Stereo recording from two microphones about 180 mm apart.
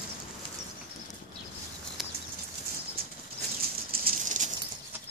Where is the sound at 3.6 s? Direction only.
55° right (ahead or behind).